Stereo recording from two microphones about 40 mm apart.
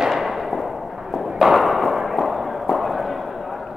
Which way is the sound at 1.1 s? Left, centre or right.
Centre.